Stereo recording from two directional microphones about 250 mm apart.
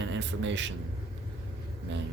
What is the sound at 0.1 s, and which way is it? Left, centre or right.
Speech, right.